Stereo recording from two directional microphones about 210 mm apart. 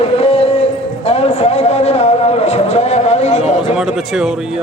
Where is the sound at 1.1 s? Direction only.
30° left (ahead or behind).